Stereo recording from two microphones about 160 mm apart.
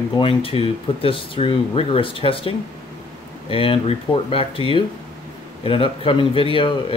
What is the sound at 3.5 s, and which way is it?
Speech, 35° left (ahead or behind).